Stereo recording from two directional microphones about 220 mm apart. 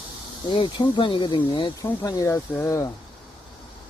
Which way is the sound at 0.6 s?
20° left (ahead or behind).